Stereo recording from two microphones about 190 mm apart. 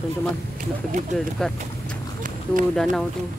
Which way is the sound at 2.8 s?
Centre (ahead or behind).